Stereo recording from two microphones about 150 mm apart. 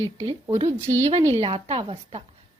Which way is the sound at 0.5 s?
45° right (ahead or behind).